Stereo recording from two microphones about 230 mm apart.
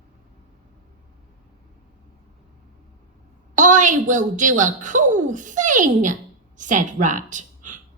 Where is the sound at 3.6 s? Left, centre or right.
Right.